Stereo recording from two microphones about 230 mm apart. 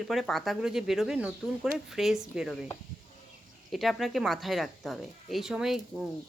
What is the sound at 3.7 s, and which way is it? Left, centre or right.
Speech, centre.